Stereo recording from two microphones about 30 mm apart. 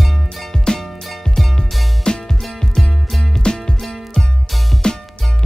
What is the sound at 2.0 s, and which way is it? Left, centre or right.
Music, left.